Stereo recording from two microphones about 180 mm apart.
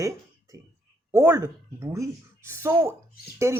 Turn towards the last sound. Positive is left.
turn(degrees=-15)  # may be behind; listen again after turning